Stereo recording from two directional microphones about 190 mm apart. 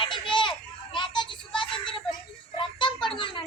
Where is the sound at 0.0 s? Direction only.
25° left (ahead or behind).